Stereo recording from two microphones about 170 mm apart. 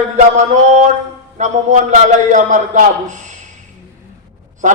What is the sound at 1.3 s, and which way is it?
A man's voice, 45° right (ahead or behind).